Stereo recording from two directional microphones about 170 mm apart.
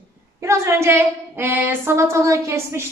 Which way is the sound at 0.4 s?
15° right (ahead or behind).